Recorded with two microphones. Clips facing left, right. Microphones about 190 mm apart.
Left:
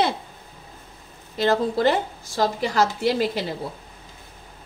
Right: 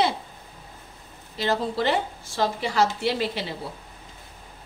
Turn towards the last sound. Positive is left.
turn(degrees=45)  # may be behind; listen again after turning